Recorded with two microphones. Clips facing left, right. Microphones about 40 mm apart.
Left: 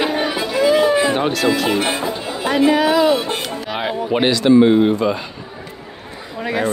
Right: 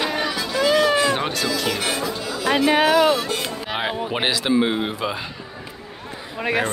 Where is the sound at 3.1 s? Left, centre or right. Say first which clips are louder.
Left 4 dB; left.